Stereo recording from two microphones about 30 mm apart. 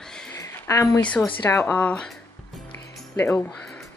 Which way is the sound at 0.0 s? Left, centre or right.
Left.